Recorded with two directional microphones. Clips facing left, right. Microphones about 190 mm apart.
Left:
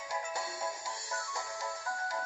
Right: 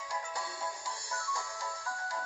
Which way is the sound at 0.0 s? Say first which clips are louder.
Left 2 dB; 25° left (ahead or behind).